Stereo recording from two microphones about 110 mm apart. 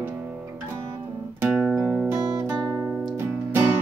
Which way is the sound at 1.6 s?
5° left (ahead or behind).